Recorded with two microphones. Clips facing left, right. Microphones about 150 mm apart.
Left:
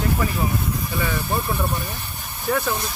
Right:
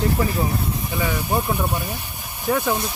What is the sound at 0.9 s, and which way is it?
Speech, 15° right (ahead or behind).